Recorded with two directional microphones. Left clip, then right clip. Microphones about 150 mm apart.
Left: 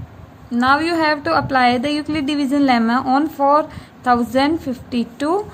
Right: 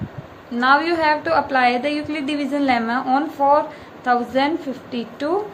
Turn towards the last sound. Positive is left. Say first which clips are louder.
# left 3 dB
turn(degrees=70)  # may be behind; listen again after turning